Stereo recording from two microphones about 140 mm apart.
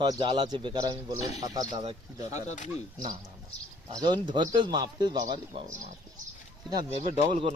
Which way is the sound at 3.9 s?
30° right (ahead or behind).